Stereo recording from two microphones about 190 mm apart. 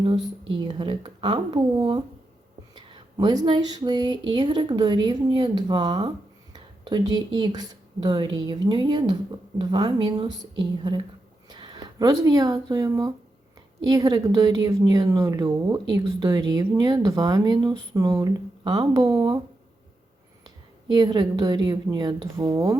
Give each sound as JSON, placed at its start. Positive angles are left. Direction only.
{"t": 0.6, "sound": "a woman's voice", "side_deg": -25}
{"t": 11.4, "sound": "a woman's voice", "side_deg": -25}
{"t": 20.9, "sound": "a woman's voice", "side_deg": -20}